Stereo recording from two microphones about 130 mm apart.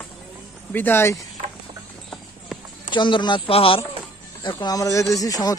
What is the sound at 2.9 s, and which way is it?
Speech, 40° left (ahead or behind).